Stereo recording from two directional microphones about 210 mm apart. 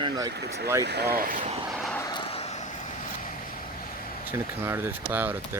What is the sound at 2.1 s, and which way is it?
Vehicle, 30° left (ahead or behind).